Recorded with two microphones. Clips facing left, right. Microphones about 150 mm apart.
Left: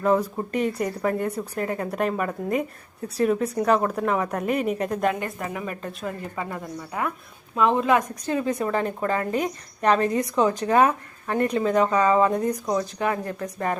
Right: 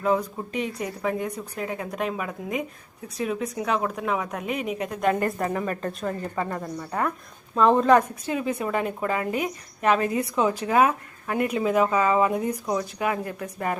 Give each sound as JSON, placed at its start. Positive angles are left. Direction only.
{"t": 0.5, "sound": "speech", "side_deg": 55}
{"t": 0.8, "sound": "a woman's voice", "side_deg": 0}
{"t": 8.3, "sound": "speech", "side_deg": -10}